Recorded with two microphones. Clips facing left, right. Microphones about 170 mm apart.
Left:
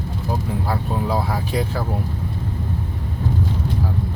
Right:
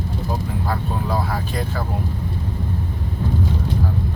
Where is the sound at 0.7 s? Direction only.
10° left (ahead or behind).